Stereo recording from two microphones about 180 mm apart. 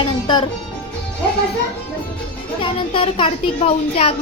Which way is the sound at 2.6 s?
30° left (ahead or behind).